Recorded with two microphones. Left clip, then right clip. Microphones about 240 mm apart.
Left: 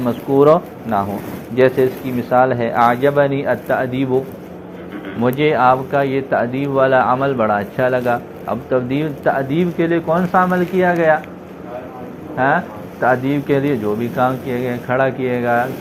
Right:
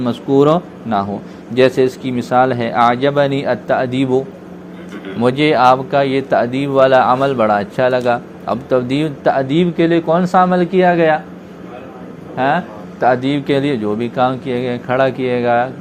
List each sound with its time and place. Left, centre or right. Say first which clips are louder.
0.0 s speech: even; right
5.2 s speech: right 2 dB; right
12.4 s speech: even; right